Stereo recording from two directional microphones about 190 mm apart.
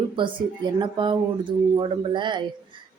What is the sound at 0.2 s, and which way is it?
Speech, 25° right (ahead or behind).